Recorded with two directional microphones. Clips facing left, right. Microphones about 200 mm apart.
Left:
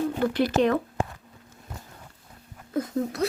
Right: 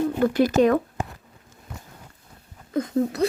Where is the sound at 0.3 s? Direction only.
45° right (ahead or behind).